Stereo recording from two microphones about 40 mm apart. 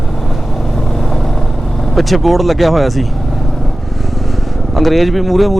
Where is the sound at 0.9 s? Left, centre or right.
Centre.